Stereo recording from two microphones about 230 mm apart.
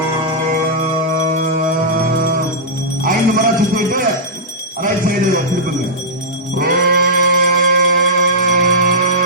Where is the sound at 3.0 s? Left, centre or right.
Right.